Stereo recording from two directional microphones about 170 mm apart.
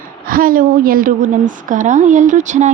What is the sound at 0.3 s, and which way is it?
A woman's voice, 55° right (ahead or behind).